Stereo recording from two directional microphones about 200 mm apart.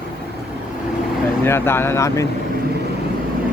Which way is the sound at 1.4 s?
10° left (ahead or behind).